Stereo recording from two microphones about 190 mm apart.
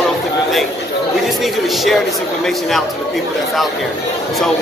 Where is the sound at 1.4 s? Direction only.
Centre (ahead or behind).